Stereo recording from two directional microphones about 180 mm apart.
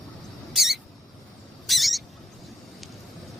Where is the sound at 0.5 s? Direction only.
Centre (ahead or behind).